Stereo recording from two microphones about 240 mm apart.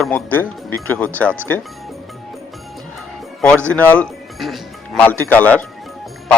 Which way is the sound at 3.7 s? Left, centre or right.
Centre.